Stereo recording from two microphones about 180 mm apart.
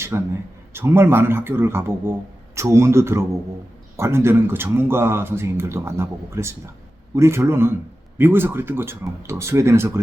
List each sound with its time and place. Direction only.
0.1 s speech: 15° right (ahead or behind)